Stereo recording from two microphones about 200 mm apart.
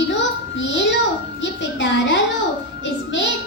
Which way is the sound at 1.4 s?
65° left (ahead or behind).